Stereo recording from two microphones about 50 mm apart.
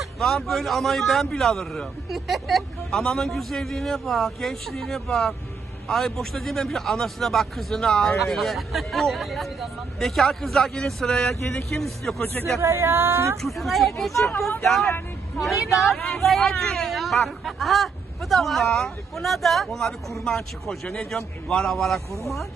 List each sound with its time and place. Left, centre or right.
0.0 s a man's voice: centre
2.0 s a man's voice: centre
12.2 s speech: left
12.5 s a woman's voice: right
13.4 s a man's voice: centre